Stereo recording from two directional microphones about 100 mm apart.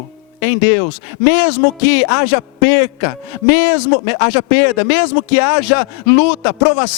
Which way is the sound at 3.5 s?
10° right (ahead or behind).